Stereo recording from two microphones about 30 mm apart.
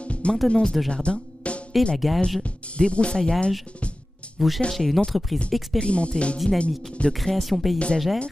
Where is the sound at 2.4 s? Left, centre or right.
Left.